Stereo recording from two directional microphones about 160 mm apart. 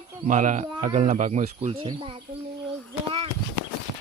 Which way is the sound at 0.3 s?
50° right (ahead or behind).